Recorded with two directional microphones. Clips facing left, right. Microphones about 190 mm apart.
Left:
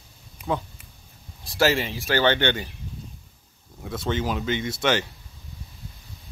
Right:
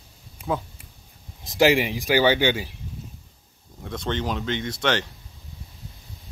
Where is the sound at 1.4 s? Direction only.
20° right (ahead or behind).